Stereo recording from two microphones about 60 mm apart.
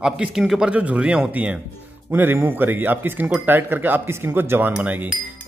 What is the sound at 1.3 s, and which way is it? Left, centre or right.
Speech, right.